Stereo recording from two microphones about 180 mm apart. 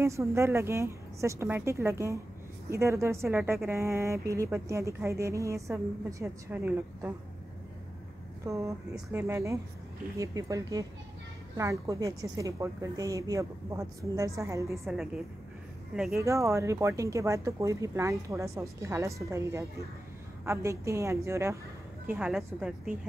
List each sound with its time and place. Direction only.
0.0 s speech: 15° right (ahead or behind)
8.5 s speech: 20° right (ahead or behind)
8.9 s speech: 10° right (ahead or behind)
16.2 s speech: 15° right (ahead or behind)
22.1 s a woman's voice: 5° right (ahead or behind)